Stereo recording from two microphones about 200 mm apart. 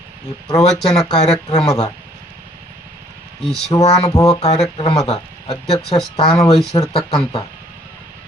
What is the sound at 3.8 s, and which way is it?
Speech, 30° left (ahead or behind).